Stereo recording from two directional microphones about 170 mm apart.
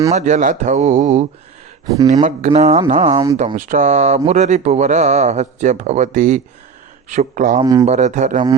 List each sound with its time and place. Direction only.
0.1 s speech: 45° right (ahead or behind)
2.2 s speech: 40° right (ahead or behind)
7.6 s speech: 20° right (ahead or behind)
7.9 s speech: 45° right (ahead or behind)